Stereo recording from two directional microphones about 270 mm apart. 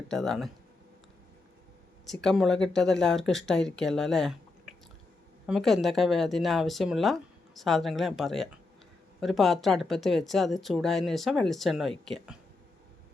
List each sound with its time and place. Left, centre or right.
0.1 s speech: centre
2.0 s speech: centre